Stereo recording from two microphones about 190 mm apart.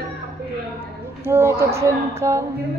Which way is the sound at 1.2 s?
15° right (ahead or behind).